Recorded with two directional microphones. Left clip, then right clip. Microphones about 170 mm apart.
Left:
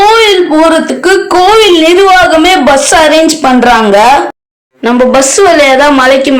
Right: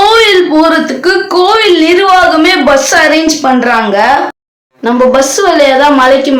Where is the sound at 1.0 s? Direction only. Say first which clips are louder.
Left 3 dB; 30° left (ahead or behind).